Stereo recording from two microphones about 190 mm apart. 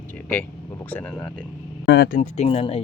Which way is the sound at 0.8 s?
10° left (ahead or behind).